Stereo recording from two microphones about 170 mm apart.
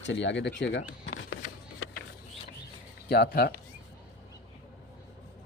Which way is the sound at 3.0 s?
70° left (ahead or behind).